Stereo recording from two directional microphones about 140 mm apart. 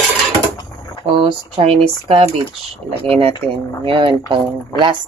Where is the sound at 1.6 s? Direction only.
45° right (ahead or behind).